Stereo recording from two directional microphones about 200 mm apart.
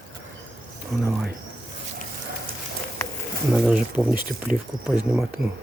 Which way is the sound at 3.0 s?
15° left (ahead or behind).